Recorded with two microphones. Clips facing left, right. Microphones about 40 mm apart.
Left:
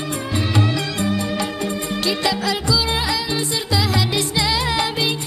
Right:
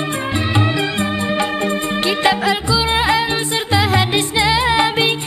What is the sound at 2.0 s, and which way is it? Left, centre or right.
Music, right.